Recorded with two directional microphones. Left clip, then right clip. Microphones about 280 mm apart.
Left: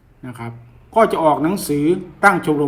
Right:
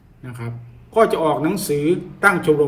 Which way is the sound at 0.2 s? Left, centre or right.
Centre.